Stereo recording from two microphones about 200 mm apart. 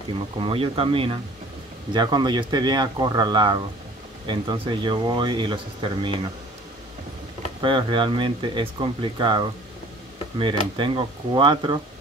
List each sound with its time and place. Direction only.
0.4 s speech: 25° right (ahead or behind)
7.6 s speech: 25° right (ahead or behind)